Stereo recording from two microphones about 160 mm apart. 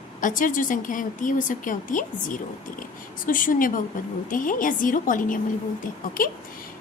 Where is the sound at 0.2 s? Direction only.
55° left (ahead or behind).